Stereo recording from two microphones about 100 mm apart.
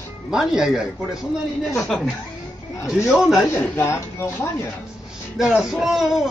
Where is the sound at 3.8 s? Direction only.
25° left (ahead or behind).